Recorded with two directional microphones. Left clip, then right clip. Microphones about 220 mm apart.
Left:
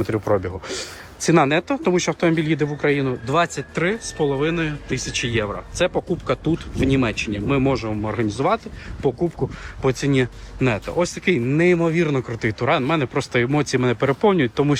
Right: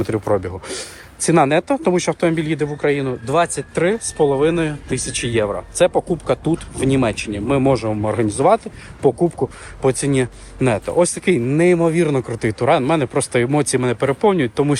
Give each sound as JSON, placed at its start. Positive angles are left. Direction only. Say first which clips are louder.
{"t": 0.3, "sound": "speech", "louder": "right 2 dB", "side_deg": 0}
{"t": 9.1, "sound": "speech", "louder": "right 5 dB", "side_deg": -15}
{"t": 9.8, "sound": "speech", "louder": "right 2 dB", "side_deg": 5}